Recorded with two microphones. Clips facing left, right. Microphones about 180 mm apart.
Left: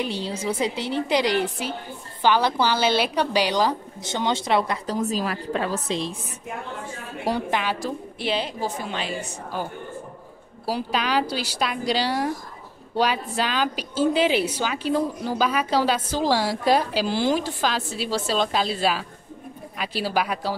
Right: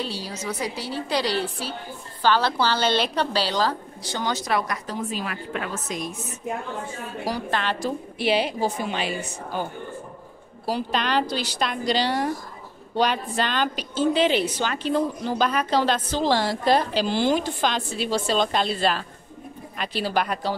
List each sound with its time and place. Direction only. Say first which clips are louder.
0.0 s a woman's voice: left 4 dB; 20° left (ahead or behind)
5.0 s a woman's voice: left 4 dB; 40° left (ahead or behind)
7.3 s a woman's voice: left 4 dB; 25° left (ahead or behind)
7.8 s a woman's voice: right 2 dB; centre (ahead or behind)
8.2 s a woman's voice: right 4 dB; 10° right (ahead or behind)
10.6 s a woman's voice: even; 5° left (ahead or behind)